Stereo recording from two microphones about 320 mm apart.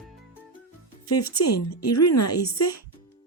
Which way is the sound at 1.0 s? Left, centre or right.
Left.